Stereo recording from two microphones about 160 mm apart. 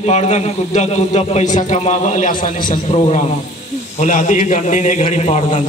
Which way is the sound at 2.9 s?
45° left (ahead or behind).